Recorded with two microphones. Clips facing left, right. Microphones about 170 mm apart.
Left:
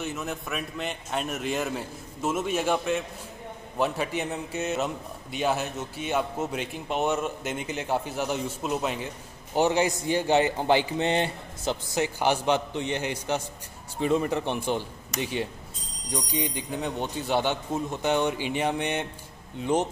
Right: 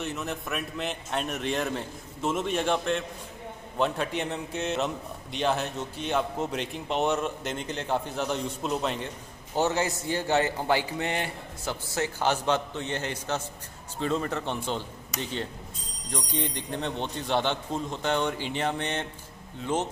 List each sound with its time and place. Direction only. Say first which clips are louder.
0.0 s a man's voice: even; centre (ahead or behind)
9.6 s a man's voice: left 3 dB; 15° left (ahead or behind)